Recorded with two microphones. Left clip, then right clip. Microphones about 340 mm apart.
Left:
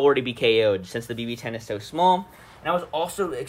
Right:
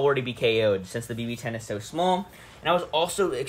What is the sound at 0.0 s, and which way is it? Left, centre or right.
Speech, left.